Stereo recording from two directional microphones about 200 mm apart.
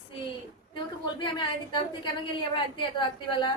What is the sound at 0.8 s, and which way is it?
A woman's voice, 25° left (ahead or behind).